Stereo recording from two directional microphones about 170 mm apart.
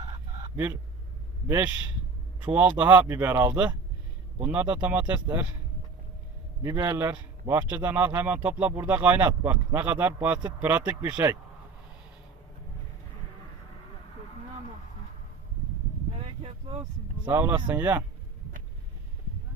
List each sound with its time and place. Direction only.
0.0 s fowl: 25° right (ahead or behind)
0.5 s a man's voice: 15° right (ahead or behind)
6.6 s a man's voice: 20° right (ahead or behind)
16.1 s a sound: 35° right (ahead or behind)
17.2 s a man's voice: 10° right (ahead or behind)